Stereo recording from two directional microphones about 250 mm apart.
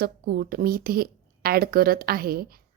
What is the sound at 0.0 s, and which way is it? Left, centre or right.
A woman's voice, right.